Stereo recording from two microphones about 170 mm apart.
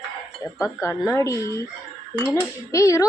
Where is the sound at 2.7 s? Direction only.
20° left (ahead or behind).